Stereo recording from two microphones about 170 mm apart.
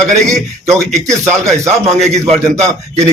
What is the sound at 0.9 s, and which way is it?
Speech, 40° right (ahead or behind).